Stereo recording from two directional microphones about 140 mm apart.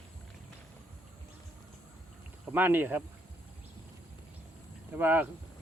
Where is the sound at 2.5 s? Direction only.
15° right (ahead or behind).